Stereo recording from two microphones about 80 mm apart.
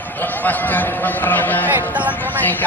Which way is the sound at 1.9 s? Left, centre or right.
Centre.